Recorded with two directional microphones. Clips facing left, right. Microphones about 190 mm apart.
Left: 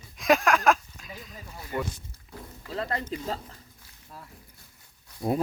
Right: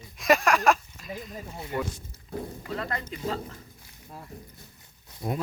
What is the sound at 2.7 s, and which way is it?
Speech, 30° left (ahead or behind).